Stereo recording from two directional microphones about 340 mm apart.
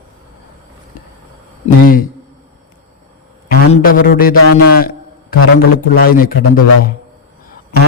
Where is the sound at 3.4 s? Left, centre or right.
Left.